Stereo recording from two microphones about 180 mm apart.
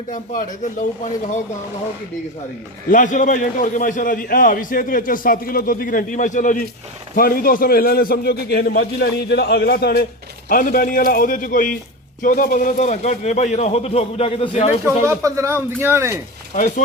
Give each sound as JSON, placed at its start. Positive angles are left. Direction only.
{"t": 0.1, "sound": "a man's voice", "side_deg": 45}
{"t": 2.9, "sound": "a man's voice", "side_deg": 45}
{"t": 10.5, "sound": "a man's voice", "side_deg": 50}
{"t": 15.0, "sound": "speech", "side_deg": -15}